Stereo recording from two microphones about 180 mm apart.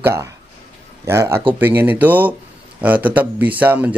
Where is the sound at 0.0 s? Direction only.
15° right (ahead or behind).